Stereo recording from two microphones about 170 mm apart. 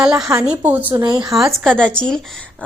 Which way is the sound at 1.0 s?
25° right (ahead or behind).